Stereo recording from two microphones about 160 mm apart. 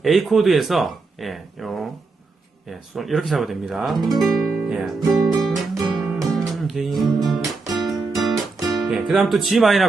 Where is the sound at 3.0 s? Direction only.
Centre (ahead or behind).